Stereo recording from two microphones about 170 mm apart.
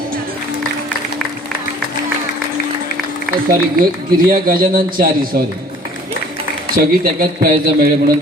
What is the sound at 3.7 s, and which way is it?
A man's voice, 55° right (ahead or behind).